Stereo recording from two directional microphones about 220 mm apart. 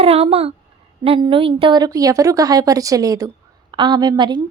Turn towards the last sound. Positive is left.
turn(degrees=-20)  # may be behind; listen again after turning